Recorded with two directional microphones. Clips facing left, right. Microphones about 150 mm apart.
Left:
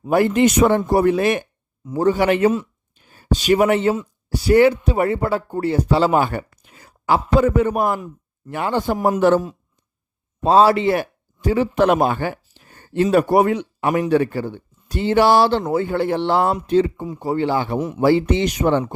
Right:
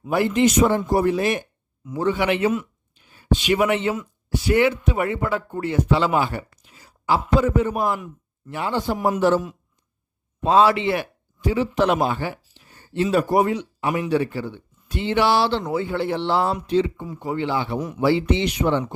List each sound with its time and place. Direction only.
0.0 s a man's voice: 45° left (ahead or behind)
1.8 s speech: 40° left (ahead or behind)
2.9 s a sound: 45° left (ahead or behind)
3.9 s speech: 35° left (ahead or behind); by 9.4 s 55° left (ahead or behind)
10.4 s a man's voice: 35° left (ahead or behind)
17.7 s a man's voice: 25° left (ahead or behind)
18.0 s speech: 45° left (ahead or behind)